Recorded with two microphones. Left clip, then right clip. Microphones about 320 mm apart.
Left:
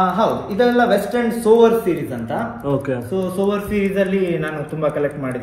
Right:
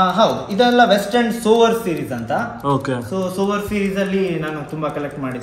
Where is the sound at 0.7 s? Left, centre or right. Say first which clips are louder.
Right 3 dB; centre.